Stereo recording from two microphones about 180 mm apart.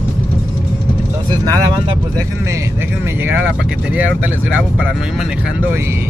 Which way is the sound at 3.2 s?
10° right (ahead or behind).